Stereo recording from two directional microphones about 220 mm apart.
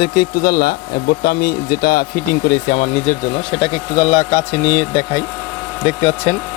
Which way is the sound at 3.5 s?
20° left (ahead or behind).